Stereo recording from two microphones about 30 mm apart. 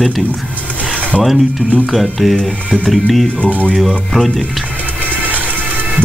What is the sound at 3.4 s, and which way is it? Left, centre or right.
Speech, left.